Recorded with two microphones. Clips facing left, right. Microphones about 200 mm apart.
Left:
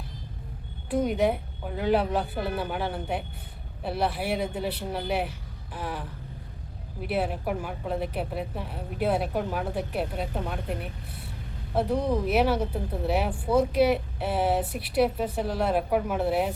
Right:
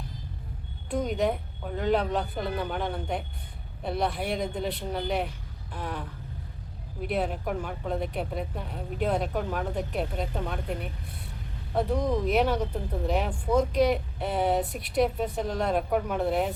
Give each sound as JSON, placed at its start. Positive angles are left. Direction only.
{"t": 1.0, "sound": "speech", "side_deg": 10}